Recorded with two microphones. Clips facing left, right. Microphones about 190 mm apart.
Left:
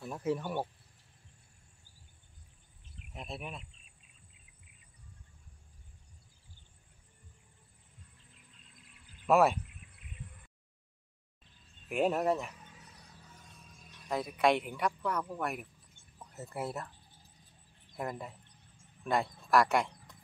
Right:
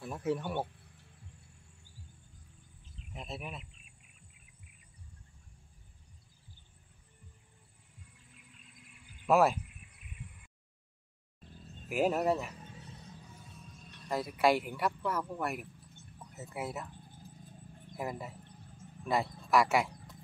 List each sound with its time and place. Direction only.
0.0 s a man's voice: centre (ahead or behind)
3.1 s speech: centre (ahead or behind)
9.3 s a man's voice: centre (ahead or behind)
11.4 s music: 45° right (ahead or behind)
11.9 s a man's voice: centre (ahead or behind)
12.5 s music: 30° right (ahead or behind)
13.7 s a man's voice: 5° left (ahead or behind)
16.9 s a sound: 50° right (ahead or behind)
17.9 s a man's voice: 5° right (ahead or behind)